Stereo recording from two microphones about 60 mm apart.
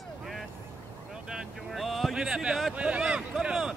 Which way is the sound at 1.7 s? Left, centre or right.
Centre.